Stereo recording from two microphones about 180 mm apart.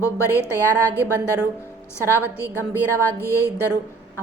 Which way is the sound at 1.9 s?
15° left (ahead or behind).